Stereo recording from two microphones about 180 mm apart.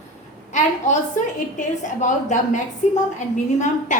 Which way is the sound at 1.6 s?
45° left (ahead or behind).